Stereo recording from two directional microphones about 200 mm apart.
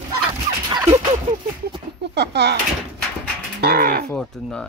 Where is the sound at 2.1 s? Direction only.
55° right (ahead or behind).